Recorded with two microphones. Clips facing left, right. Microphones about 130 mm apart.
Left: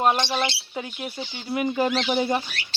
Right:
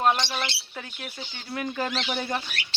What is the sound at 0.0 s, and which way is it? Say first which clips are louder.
Speech: left 2 dB; 15° left (ahead or behind).